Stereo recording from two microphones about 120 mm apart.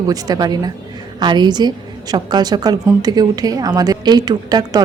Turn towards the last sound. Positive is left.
turn(degrees=-35)  # may be behind; listen again after turning